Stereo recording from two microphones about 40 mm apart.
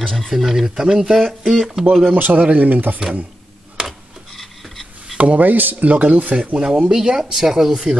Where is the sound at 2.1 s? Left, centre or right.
Right.